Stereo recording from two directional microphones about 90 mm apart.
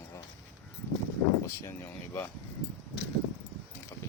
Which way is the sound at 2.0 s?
25° left (ahead or behind).